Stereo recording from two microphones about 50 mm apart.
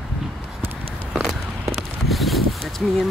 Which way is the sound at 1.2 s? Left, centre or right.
Centre.